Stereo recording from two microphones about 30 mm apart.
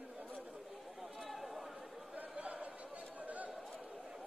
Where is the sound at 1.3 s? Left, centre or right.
Centre.